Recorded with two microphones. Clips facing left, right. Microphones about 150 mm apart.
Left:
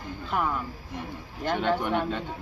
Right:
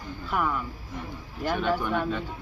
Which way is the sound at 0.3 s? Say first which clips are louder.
Even; 25° left (ahead or behind).